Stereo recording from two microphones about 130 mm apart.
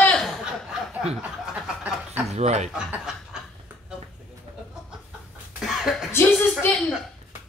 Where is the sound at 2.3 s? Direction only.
55° right (ahead or behind).